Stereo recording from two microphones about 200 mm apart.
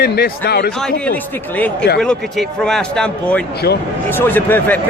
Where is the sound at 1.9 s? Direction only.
5° left (ahead or behind).